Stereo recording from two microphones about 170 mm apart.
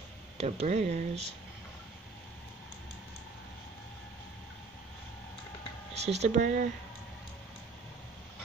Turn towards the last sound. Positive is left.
turn(degrees=-40)  # may be behind; listen again after turning